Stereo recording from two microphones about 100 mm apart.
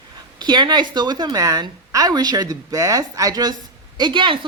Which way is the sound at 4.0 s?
55° right (ahead or behind).